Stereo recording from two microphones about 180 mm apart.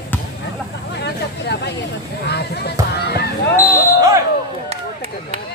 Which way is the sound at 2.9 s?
65° left (ahead or behind).